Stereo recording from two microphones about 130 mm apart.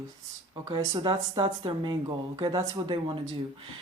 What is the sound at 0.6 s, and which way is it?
Speech, 35° right (ahead or behind).